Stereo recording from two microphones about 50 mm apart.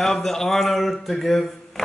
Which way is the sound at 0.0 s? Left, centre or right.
Centre.